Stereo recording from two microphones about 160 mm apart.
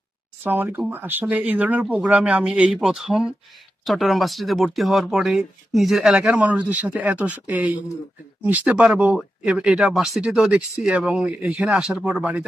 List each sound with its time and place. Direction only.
0.4 s speech: 10° right (ahead or behind)